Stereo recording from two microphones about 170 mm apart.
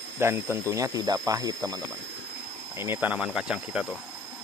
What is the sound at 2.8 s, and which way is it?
Speech, 10° right (ahead or behind).